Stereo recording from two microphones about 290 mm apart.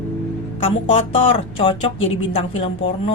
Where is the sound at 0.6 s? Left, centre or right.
Centre.